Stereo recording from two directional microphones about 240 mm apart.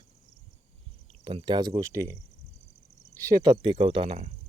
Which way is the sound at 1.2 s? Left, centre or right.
Right.